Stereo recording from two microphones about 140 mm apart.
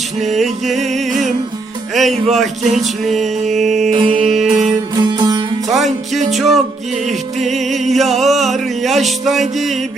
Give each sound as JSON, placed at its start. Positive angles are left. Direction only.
{"t": 0.3, "sound": "mantra", "side_deg": 0}
{"t": 2.0, "sound": "mantra", "side_deg": 0}
{"t": 3.9, "sound": "music", "side_deg": -40}
{"t": 4.4, "sound": "music", "side_deg": -5}
{"t": 5.1, "sound": "music", "side_deg": -30}
{"t": 5.7, "sound": "mantra", "side_deg": 0}